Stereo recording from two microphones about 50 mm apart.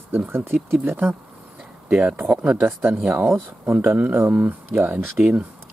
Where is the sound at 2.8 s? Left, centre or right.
Right.